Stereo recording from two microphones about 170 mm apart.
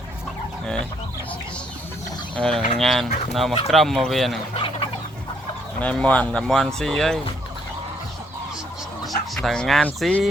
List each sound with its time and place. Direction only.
2.3 s speech: 5° left (ahead or behind)
4.5 s chicken: 30° left (ahead or behind)
5.8 s speech: 5° left (ahead or behind)
9.3 s speech: centre (ahead or behind)